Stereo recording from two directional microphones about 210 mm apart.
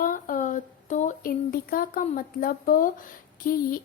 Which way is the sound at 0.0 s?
40° left (ahead or behind).